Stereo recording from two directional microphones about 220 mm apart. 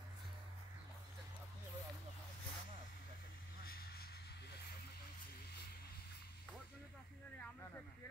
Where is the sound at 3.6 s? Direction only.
45° left (ahead or behind).